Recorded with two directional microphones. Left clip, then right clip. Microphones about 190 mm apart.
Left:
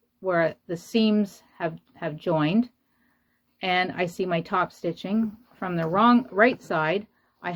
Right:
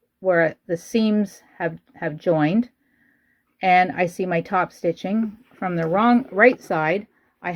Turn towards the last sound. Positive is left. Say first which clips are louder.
# right 4 dB
turn(degrees=-35)  # may be behind; listen again after turning